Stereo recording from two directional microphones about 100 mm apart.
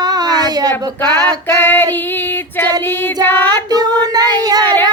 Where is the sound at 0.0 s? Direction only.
40° right (ahead or behind).